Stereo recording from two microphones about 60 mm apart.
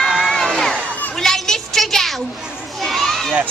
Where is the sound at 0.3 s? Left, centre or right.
Centre.